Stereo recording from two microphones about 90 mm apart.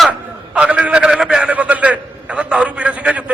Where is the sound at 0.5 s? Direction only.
15° right (ahead or behind).